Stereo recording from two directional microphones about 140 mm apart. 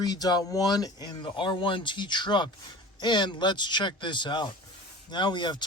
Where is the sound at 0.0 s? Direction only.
30° left (ahead or behind).